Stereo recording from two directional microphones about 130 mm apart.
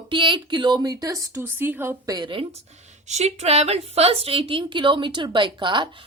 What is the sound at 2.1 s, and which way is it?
Speech, 35° right (ahead or behind).